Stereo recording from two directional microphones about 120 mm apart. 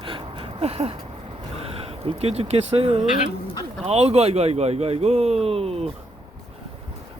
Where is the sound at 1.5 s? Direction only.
55° right (ahead or behind).